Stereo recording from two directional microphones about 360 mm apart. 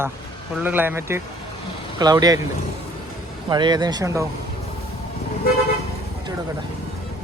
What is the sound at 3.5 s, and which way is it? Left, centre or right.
Speech, centre.